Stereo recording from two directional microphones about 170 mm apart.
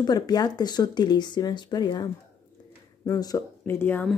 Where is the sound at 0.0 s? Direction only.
25° left (ahead or behind).